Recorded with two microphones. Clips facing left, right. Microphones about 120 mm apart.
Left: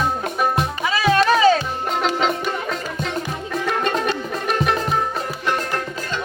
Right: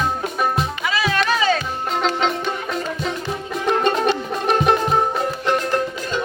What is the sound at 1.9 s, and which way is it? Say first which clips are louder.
Music: even; 5° left (ahead or behind).